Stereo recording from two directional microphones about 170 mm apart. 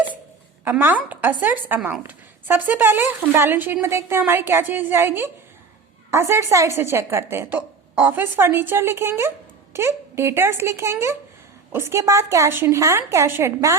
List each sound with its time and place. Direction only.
0.6 s a woman's voice: 10° right (ahead or behind)